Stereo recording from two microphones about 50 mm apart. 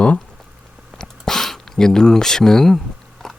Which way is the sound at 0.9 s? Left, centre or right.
Centre.